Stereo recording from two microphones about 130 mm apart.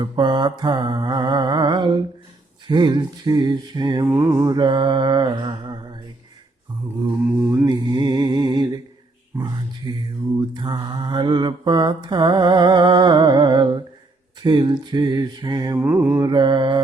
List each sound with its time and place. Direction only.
0.0 s mantra: 35° right (ahead or behind)
4.5 s mantra: 35° right (ahead or behind)
7.3 s mantra: 15° right (ahead or behind)
7.7 s music: 35° right (ahead or behind)
9.9 s mantra: 35° right (ahead or behind)
15.8 s mantra: 15° right (ahead or behind); by 16.8 s 35° right (ahead or behind)